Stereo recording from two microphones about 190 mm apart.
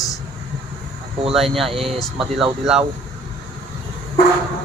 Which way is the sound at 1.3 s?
Centre (ahead or behind).